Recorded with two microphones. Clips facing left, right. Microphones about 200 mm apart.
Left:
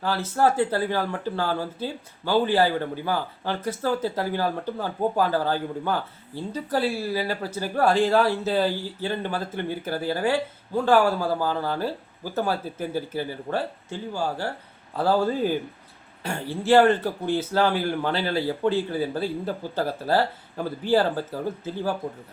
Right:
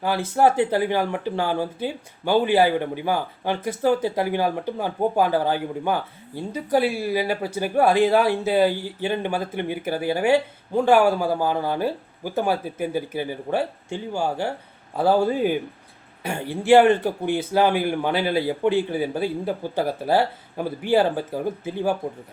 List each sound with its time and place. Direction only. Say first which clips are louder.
0.3 s speech: right 3 dB; 15° right (ahead or behind)